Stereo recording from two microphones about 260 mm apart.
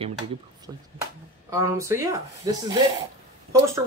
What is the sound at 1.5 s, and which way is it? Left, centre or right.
Speech, centre.